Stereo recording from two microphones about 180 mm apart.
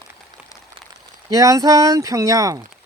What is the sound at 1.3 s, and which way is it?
Speech, 20° right (ahead or behind).